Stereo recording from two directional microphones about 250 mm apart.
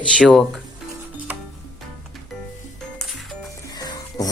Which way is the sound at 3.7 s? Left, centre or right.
Centre.